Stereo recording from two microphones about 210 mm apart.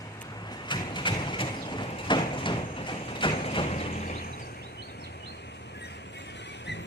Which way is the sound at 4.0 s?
45° left (ahead or behind).